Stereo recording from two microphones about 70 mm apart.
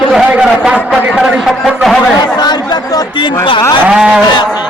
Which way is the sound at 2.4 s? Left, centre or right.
Left.